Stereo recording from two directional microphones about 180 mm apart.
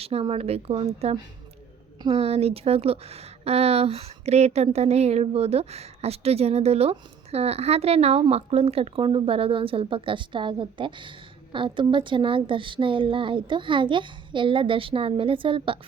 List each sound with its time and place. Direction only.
0.0 s a woman's voice: 35° right (ahead or behind)